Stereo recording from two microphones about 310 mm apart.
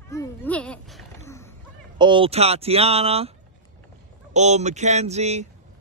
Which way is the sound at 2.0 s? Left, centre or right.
Centre.